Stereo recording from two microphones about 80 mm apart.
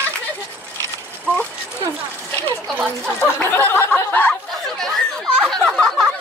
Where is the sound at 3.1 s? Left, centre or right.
Left.